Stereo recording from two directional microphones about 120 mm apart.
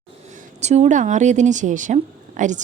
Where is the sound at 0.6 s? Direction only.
70° right (ahead or behind).